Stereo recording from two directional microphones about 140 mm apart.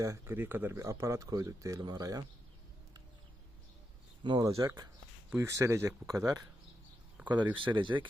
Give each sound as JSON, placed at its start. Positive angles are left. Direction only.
{"t": 0.0, "sound": "speech", "side_deg": -20}
{"t": 4.2, "sound": "speech", "side_deg": -30}
{"t": 7.5, "sound": "speech", "side_deg": -35}